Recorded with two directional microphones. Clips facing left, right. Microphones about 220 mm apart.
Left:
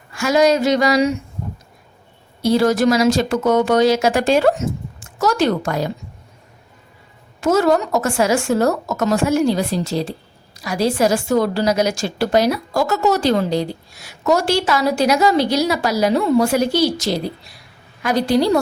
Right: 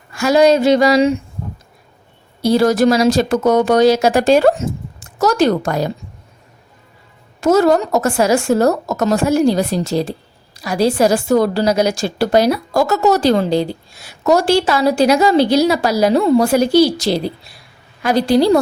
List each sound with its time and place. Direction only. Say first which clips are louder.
0.2 s a sound: right 3 dB; 35° right (ahead or behind)
2.4 s a woman's voice: right 2 dB; 35° right (ahead or behind)
7.4 s a woman's voice: right 3 dB; 40° right (ahead or behind)